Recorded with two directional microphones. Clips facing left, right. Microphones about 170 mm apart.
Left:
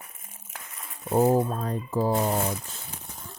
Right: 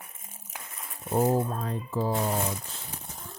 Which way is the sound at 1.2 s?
45° left (ahead or behind).